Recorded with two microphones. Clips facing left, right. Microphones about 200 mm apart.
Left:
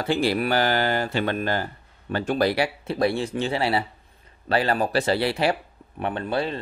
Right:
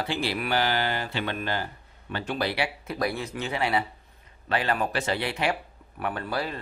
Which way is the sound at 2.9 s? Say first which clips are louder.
Left 6 dB; 30° left (ahead or behind).